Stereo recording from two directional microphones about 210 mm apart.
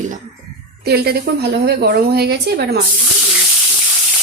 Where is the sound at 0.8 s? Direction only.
50° right (ahead or behind).